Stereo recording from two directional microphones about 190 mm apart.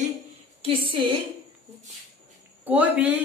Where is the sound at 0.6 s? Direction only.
30° right (ahead or behind).